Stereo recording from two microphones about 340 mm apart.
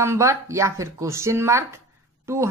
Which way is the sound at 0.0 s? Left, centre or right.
Centre.